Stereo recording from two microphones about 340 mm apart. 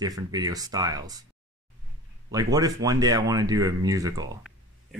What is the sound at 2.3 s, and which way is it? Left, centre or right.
Speech, centre.